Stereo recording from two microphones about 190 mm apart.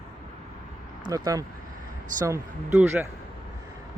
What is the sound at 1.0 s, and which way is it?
Speech, 20° right (ahead or behind).